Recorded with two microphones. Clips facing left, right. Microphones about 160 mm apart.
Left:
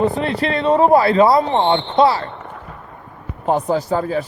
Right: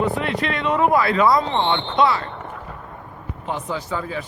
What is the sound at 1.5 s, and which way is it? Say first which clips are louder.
Speech: left 5 dB; 45° left (ahead or behind).